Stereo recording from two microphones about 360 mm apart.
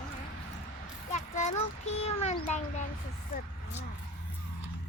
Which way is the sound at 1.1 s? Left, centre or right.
Centre.